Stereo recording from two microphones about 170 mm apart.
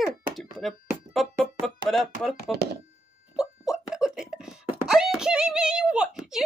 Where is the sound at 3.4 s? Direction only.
5° right (ahead or behind).